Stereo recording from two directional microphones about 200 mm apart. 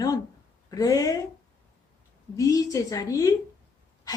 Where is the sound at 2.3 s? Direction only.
15° left (ahead or behind).